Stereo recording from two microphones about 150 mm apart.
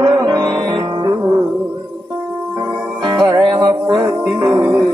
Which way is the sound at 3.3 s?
30° right (ahead or behind).